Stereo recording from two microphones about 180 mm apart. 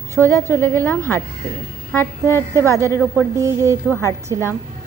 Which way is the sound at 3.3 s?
15° right (ahead or behind).